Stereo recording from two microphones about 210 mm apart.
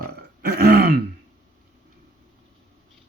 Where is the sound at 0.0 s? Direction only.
50° right (ahead or behind).